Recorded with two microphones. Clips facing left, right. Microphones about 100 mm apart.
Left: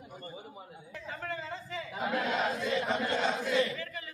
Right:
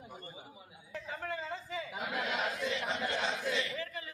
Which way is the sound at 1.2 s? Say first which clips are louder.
Left 1 dB; 15° right (ahead or behind).